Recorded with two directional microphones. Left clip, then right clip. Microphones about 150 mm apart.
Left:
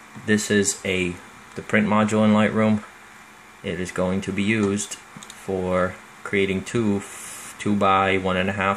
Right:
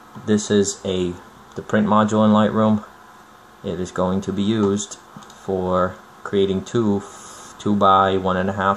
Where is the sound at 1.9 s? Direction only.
25° left (ahead or behind).